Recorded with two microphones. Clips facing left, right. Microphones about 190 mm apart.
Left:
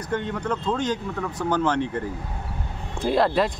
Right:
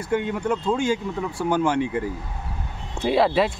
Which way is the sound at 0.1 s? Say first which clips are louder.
Right 3 dB; 10° right (ahead or behind).